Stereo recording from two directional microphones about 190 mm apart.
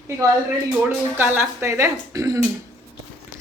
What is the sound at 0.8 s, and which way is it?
A woman's voice, 10° right (ahead or behind).